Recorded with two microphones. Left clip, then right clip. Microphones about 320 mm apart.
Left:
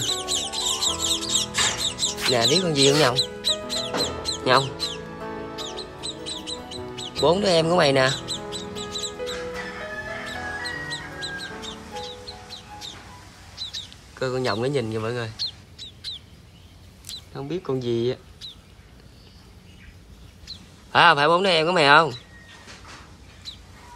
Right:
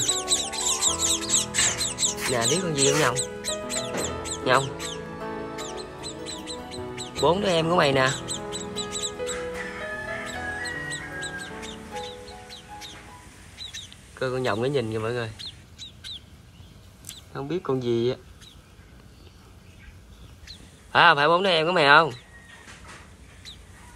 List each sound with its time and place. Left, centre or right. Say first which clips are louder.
0.1 s music: even; centre
1.9 s music: left 2 dB; centre
2.1 s music: left 6 dB; centre
14.1 s speech: left 1 dB; centre
17.3 s speech: right 1 dB; centre
20.9 s speech: left 1 dB; centre